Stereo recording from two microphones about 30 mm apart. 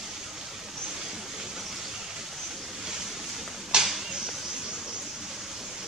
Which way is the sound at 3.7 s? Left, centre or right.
Right.